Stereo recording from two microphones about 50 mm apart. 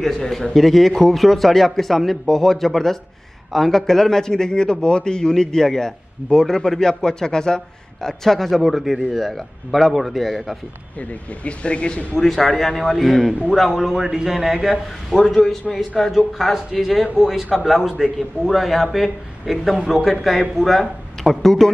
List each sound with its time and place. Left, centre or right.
0.0 s a man's voice: centre
11.0 s speech: left
12.2 s a man's voice: centre
15.1 s a man's voice: centre